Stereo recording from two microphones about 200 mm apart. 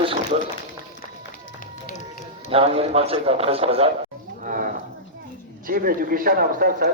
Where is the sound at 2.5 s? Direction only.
30° right (ahead or behind).